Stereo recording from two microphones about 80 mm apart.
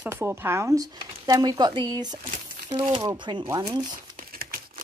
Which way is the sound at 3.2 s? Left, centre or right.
Right.